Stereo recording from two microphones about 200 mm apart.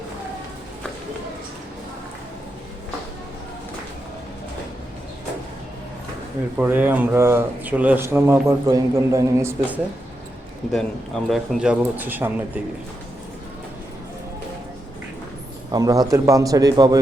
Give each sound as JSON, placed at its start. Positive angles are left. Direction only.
{"t": 6.6, "sound": "speech", "side_deg": -10}
{"t": 10.7, "sound": "speech", "side_deg": 0}
{"t": 15.7, "sound": "speech", "side_deg": -20}